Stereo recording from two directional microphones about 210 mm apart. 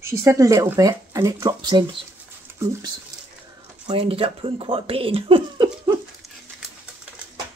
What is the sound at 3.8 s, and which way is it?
Speech, 25° right (ahead or behind).